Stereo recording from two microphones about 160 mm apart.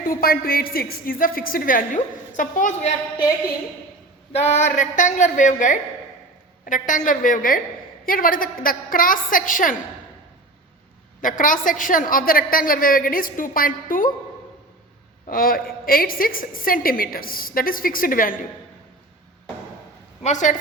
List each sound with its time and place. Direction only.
0.0 s a woman's voice: 65° left (ahead or behind)
4.3 s a woman's voice: 40° left (ahead or behind); by 9.7 s 60° left (ahead or behind)
11.2 s a woman's voice: 55° left (ahead or behind)
15.3 s a woman's voice: 65° left (ahead or behind)
20.2 s a woman's voice: 50° left (ahead or behind)